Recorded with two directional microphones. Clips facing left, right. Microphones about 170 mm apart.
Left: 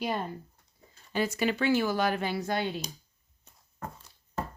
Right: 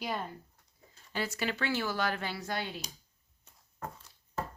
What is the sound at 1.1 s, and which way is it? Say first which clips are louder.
Speech: left 6 dB; 15° left (ahead or behind).